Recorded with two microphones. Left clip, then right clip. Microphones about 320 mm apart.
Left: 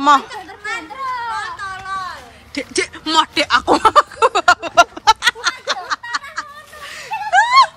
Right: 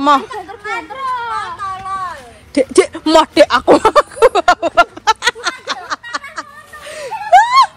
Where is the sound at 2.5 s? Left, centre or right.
Centre.